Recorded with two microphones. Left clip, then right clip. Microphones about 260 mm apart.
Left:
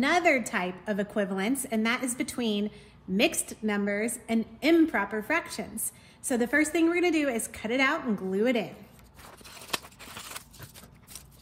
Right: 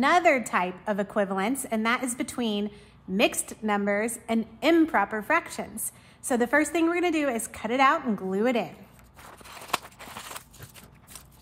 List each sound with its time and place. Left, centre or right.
0.0 s a woman's voice: centre
10.0 s biting: centre